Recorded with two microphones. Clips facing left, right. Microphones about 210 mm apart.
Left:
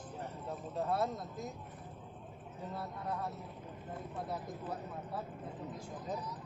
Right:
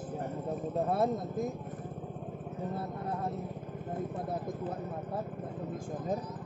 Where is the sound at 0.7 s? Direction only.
55° right (ahead or behind).